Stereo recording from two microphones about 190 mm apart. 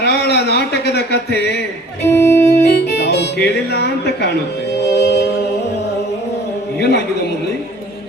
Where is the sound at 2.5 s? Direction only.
60° left (ahead or behind).